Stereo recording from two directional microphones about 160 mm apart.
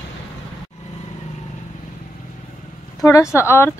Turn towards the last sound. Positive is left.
turn(degrees=15)  # may be behind; listen again after turning